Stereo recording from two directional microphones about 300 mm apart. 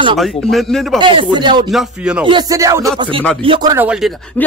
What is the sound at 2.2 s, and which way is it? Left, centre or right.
Speech, centre.